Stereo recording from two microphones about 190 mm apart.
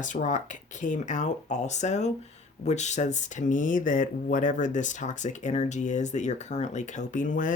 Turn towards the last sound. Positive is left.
turn(degrees=45)  # may be behind; listen again after turning